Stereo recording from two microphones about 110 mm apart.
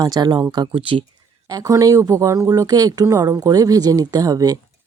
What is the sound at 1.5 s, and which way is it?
Speech, 30° right (ahead or behind).